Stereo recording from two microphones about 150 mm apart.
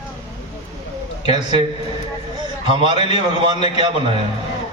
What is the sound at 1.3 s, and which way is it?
Speech, 35° right (ahead or behind).